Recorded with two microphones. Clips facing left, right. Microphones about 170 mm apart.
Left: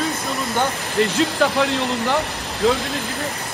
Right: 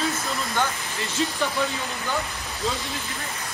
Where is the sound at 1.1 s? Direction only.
80° left.